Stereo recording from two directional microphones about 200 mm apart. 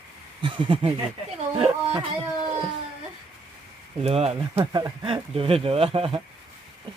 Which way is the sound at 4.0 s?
30° right (ahead or behind).